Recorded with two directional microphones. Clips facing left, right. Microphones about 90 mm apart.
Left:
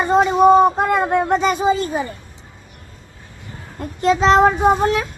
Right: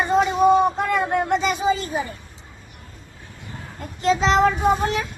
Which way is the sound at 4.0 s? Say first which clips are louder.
Left 4 dB; 45° left (ahead or behind).